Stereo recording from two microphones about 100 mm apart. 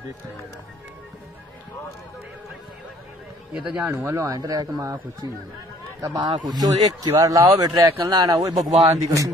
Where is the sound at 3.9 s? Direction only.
25° right (ahead or behind).